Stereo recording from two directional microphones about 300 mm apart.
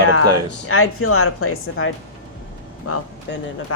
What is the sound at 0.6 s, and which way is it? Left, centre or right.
Speech, left.